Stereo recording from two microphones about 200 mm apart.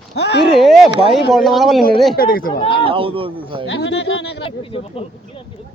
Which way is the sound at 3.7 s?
60° left (ahead or behind).